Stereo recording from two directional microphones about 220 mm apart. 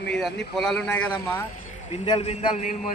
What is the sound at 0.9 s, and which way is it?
Speech, 5° left (ahead or behind).